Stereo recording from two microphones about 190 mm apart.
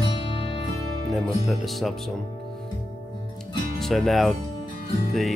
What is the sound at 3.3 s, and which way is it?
Music, centre (ahead or behind).